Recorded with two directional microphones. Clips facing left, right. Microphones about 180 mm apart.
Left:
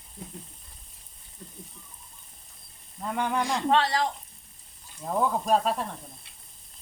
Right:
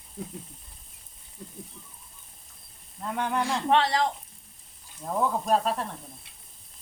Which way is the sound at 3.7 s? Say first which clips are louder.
Right 1 dB; 20° right (ahead or behind).